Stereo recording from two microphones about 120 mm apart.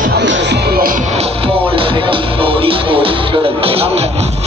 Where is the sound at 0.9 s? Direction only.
60° right (ahead or behind).